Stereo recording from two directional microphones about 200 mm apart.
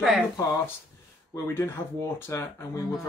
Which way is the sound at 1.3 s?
10° left (ahead or behind).